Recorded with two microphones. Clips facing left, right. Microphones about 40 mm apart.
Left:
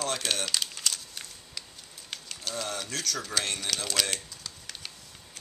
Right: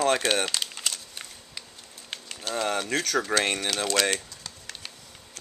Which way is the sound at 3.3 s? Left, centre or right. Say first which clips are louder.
Right 7 dB; right.